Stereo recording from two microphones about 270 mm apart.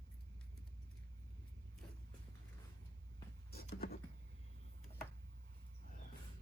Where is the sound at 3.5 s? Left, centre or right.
Left.